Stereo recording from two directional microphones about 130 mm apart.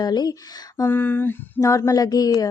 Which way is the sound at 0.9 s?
15° left (ahead or behind).